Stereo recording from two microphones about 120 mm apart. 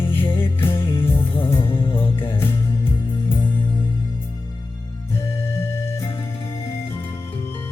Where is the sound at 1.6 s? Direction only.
50° left (ahead or behind).